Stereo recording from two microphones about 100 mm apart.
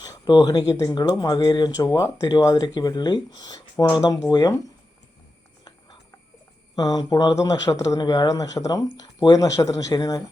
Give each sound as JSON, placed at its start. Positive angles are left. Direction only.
{"t": 0.0, "sound": "a sound", "side_deg": 40}
{"t": 0.7, "sound": "speech", "side_deg": 40}
{"t": 6.7, "sound": "speech", "side_deg": 40}
{"t": 7.3, "sound": "speech", "side_deg": 35}